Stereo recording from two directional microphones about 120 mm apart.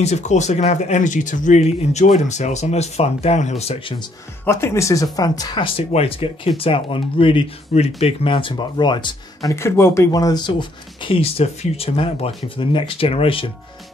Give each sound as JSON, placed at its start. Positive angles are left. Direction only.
{"t": 0.0, "sound": "speech", "side_deg": 70}
{"t": 4.5, "sound": "speech", "side_deg": 20}
{"t": 5.7, "sound": "speech", "side_deg": 50}
{"t": 7.7, "sound": "speech", "side_deg": 60}
{"t": 9.5, "sound": "speech", "side_deg": 25}